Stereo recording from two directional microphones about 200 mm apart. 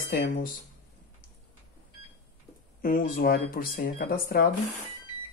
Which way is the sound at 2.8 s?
45° left (ahead or behind).